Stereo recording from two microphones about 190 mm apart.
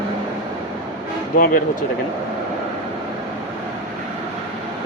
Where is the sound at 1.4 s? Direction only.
45° left (ahead or behind).